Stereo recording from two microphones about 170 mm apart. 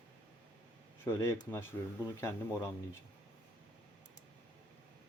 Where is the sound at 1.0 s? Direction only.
15° left (ahead or behind).